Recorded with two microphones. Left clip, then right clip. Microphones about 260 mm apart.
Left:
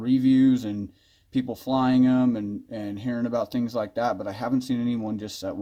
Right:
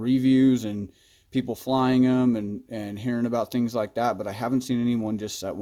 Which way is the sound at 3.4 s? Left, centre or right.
Right.